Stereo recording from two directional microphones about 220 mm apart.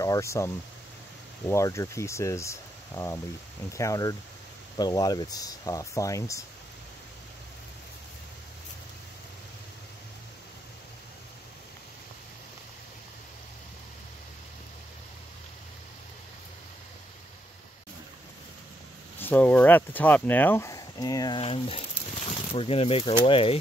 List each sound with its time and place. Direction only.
0.0 s speech: 15° left (ahead or behind)
19.1 s speech: 10° left (ahead or behind); by 23.6 s 25° left (ahead or behind)